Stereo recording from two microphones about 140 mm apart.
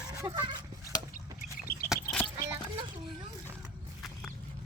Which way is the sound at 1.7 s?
90° left.